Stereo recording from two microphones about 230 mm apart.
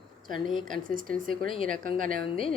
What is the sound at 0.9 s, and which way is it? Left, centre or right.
Speech, right.